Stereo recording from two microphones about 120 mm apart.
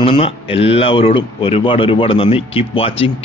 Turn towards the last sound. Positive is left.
turn(degrees=50)  # may be behind; listen again after turning